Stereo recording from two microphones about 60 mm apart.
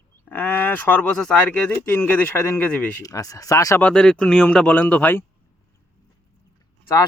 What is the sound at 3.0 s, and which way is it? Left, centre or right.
Speech, left.